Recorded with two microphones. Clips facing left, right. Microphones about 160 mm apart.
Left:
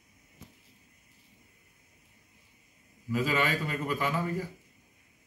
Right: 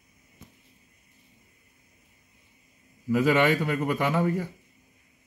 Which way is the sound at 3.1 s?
75° right (ahead or behind).